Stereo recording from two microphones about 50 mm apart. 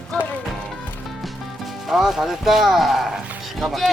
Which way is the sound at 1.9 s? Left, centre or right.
Centre.